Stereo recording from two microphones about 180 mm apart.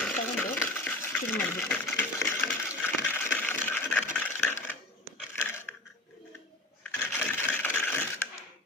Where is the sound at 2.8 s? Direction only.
10° left (ahead or behind).